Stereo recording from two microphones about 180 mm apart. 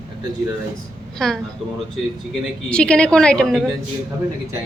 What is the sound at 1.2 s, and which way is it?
Speech, centre (ahead or behind).